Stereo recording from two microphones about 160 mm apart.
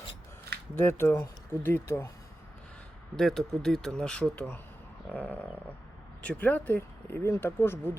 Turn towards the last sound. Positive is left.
turn(degrees=15)  # may be behind; listen again after turning